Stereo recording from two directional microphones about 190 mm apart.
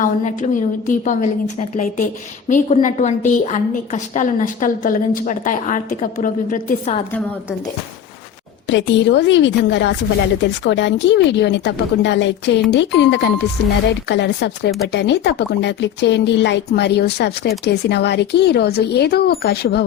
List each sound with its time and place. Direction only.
0.0 s a woman's voice: 40° left (ahead or behind)
8.7 s a woman's voice: 70° left (ahead or behind)